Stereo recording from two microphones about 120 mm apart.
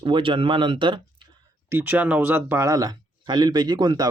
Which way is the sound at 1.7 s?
15° right (ahead or behind).